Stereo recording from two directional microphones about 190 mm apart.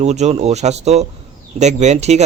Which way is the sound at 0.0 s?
35° right (ahead or behind).